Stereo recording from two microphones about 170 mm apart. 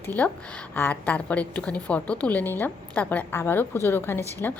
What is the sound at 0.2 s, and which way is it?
A woman's voice, 10° left (ahead or behind).